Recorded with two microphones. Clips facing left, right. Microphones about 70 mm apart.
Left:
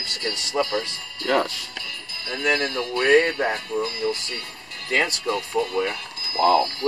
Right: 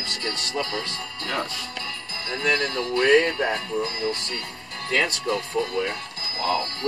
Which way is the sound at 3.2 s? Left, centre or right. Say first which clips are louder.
Left 1 dB; left.